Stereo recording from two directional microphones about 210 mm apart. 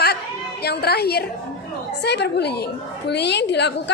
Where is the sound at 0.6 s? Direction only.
50° left (ahead or behind).